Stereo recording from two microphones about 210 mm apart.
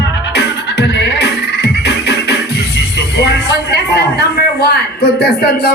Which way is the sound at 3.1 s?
50° left (ahead or behind).